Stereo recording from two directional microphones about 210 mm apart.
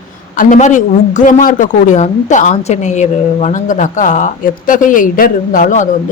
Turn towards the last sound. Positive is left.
turn(degrees=40)  # may be behind; listen again after turning